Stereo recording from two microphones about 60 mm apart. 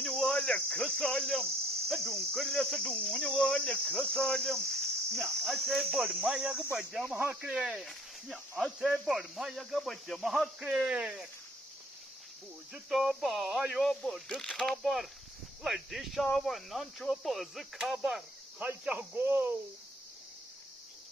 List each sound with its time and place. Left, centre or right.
0.0 s speech: centre
2.9 s cricket: centre
6.3 s speech: centre
7.8 s speech: centre
12.7 s speech: centre
19.1 s speech: right